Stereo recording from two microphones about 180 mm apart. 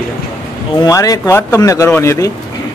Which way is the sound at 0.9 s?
20° left (ahead or behind).